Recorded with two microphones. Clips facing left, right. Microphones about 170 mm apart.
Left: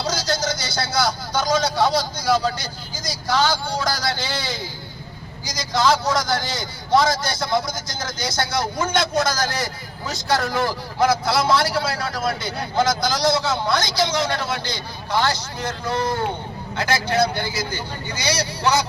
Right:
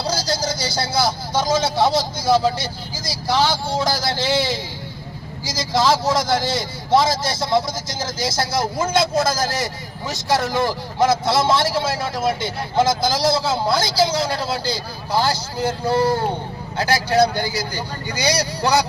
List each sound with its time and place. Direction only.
0.1 s a man's voice: 35° right (ahead or behind)
5.5 s a man's voice: 25° right (ahead or behind)